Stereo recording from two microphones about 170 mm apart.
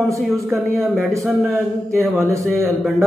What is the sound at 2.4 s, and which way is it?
Speech, centre (ahead or behind).